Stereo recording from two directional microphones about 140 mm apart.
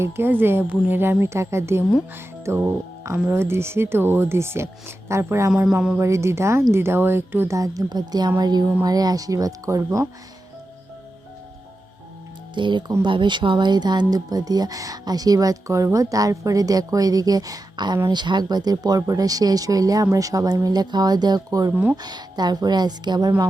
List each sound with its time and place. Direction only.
0.0 s speech: 15° right (ahead or behind)
12.5 s speech: 35° right (ahead or behind)
21.7 s speech: 10° right (ahead or behind)
22.0 s speech: 30° right (ahead or behind)